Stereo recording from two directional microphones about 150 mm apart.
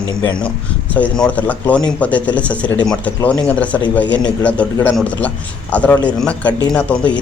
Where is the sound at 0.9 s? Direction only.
5° left (ahead or behind).